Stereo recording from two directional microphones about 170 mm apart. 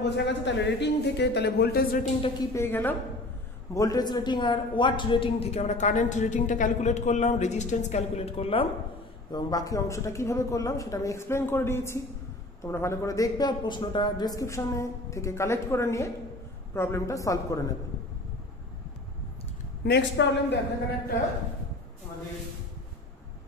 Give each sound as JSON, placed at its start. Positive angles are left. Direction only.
{"t": 0.0, "sound": "speech", "side_deg": 90}
{"t": 2.5, "sound": "a man's voice", "side_deg": 15}
{"t": 9.3, "sound": "a man's voice", "side_deg": 20}
{"t": 19.8, "sound": "a woman's voice", "side_deg": 75}